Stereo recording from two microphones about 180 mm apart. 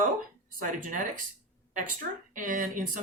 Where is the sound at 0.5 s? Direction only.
50° right (ahead or behind).